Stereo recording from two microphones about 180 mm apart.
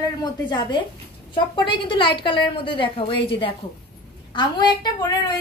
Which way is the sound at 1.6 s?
25° left (ahead or behind).